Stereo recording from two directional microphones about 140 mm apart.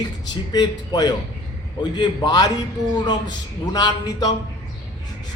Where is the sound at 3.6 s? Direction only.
25° left (ahead or behind).